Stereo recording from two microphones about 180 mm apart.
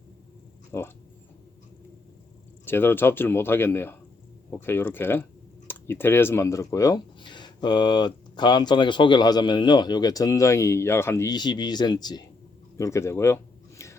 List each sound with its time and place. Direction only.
0.7 s speech: 15° left (ahead or behind)
2.6 s speech: 10° left (ahead or behind)
12.7 s a sound: 15° left (ahead or behind)